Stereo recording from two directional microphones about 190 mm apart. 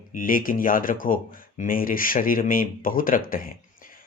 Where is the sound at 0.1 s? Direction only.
45° left (ahead or behind).